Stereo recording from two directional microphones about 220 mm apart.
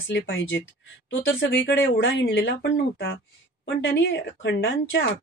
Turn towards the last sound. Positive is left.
turn(degrees=50)  # may be behind; listen again after turning